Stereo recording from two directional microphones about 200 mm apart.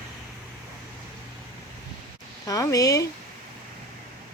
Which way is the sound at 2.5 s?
15° left (ahead or behind).